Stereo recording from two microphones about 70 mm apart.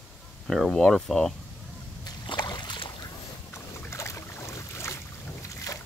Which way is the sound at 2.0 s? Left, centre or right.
Left.